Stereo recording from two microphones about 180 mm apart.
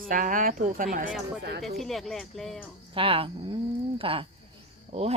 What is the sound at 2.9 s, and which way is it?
Speech, 30° right (ahead or behind).